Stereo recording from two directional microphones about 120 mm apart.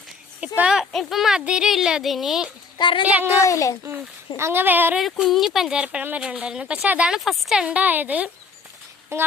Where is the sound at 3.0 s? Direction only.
10° right (ahead or behind).